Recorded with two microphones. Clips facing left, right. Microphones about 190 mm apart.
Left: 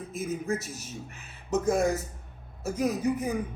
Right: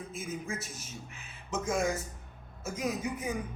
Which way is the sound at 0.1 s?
40° left (ahead or behind).